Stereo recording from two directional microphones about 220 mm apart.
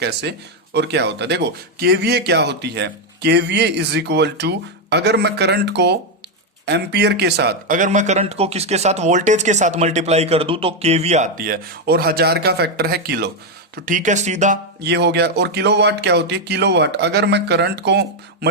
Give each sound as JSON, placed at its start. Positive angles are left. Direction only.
{"t": 0.0, "sound": "speech", "side_deg": -50}
{"t": 14.8, "sound": "speech", "side_deg": -50}